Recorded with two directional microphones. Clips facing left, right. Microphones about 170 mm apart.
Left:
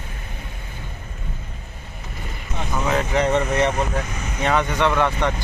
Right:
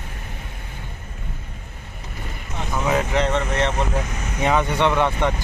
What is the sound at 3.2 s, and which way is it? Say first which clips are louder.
Speech: left 2 dB; 10° left (ahead or behind).